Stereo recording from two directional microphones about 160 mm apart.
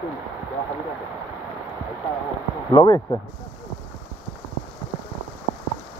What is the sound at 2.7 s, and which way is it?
Speech, 25° left (ahead or behind).